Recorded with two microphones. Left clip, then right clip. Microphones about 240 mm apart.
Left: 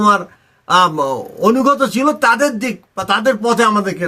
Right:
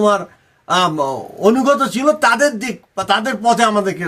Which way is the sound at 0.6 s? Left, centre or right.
Centre.